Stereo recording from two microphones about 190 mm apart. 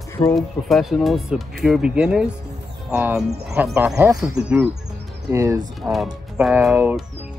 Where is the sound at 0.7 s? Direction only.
Centre (ahead or behind); by 4.2 s 15° right (ahead or behind).